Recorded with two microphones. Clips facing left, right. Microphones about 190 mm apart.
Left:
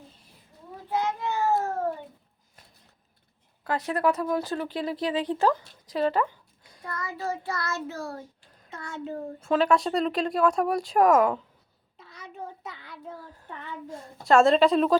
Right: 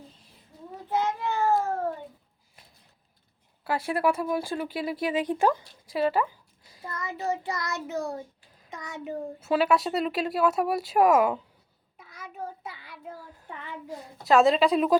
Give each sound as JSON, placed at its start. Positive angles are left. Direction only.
{"t": 0.9, "sound": "a sound", "side_deg": 15}
{"t": 3.6, "sound": "speech", "side_deg": -10}
{"t": 6.8, "sound": "child singing", "side_deg": -20}
{"t": 8.7, "sound": "speech", "side_deg": -15}
{"t": 11.9, "sound": "a sound", "side_deg": -10}
{"t": 13.9, "sound": "a woman's voice", "side_deg": -5}